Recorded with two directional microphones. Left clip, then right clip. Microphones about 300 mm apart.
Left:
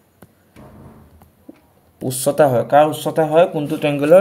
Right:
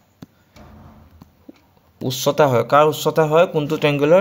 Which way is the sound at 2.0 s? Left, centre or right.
Centre.